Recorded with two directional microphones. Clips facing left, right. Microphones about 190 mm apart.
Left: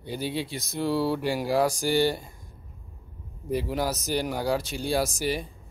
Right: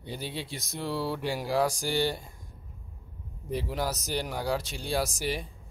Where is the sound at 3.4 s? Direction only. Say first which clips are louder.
Left 4 dB; 5° left (ahead or behind).